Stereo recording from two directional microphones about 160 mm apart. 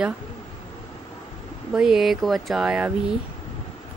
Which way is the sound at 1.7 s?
5° right (ahead or behind).